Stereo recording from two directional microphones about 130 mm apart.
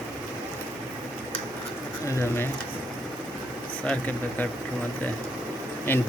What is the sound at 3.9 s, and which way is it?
Speech, 10° left (ahead or behind).